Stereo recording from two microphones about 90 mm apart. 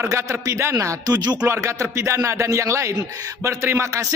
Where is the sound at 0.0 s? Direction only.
30° right (ahead or behind); by 1.4 s 50° right (ahead or behind).